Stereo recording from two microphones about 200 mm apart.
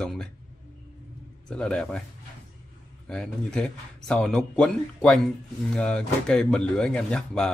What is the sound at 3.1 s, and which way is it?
Speech, 5° left (ahead or behind).